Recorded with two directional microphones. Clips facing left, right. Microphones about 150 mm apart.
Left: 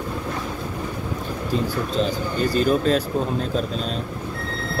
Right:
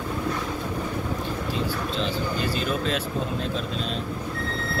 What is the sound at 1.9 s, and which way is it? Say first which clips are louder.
Speech: left 6 dB; 45° left (ahead or behind).